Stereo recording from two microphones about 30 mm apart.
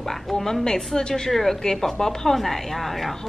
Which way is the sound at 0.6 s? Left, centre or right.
Centre.